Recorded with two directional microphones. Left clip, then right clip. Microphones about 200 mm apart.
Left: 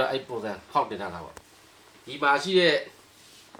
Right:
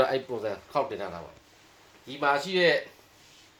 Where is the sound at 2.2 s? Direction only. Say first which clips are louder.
Left 3 dB; 45° right (ahead or behind).